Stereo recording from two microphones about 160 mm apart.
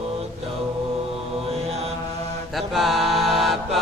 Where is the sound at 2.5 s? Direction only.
Centre (ahead or behind).